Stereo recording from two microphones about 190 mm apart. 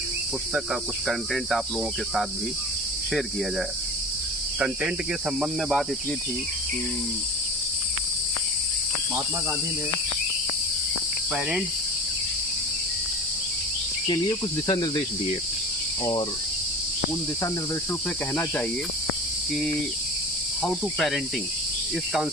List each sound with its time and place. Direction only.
0.5 s cricket: centre (ahead or behind)
5.4 s cricket: 5° right (ahead or behind)
14.1 s cricket: 20° left (ahead or behind)
20.6 s cricket: centre (ahead or behind)